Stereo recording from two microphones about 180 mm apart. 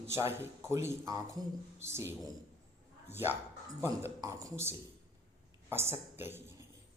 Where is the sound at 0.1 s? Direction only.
15° right (ahead or behind).